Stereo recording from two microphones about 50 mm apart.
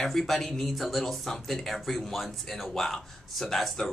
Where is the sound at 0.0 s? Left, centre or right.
Centre.